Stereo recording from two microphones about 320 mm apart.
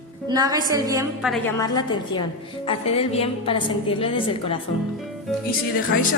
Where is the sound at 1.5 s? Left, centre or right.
Centre.